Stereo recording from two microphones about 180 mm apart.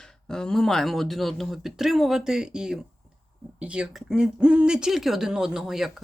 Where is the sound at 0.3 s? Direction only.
5° left (ahead or behind).